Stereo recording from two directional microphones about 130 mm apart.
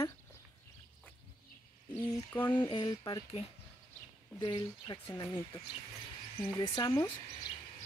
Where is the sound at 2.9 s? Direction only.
30° left (ahead or behind).